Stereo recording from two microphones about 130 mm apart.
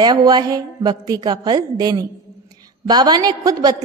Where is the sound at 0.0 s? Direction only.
30° right (ahead or behind).